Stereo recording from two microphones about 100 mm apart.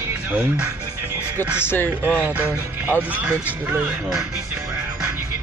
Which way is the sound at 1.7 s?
20° left (ahead or behind).